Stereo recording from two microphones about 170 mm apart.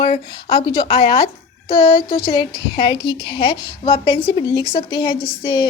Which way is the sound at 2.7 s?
25° left (ahead or behind).